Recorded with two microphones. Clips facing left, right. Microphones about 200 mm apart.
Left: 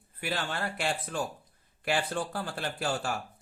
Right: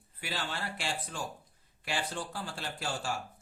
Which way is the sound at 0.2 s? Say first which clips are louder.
Left 5 dB; 55° left (ahead or behind).